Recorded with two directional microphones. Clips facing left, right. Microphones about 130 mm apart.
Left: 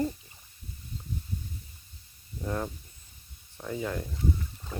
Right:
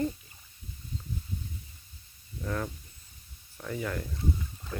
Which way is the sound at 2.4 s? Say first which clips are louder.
Left 1 dB; 20° left (ahead or behind).